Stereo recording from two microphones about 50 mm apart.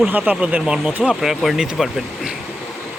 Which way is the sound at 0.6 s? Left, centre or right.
Centre.